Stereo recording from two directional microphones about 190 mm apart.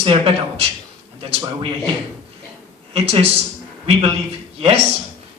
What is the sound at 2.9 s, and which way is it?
Speech, 35° right (ahead or behind).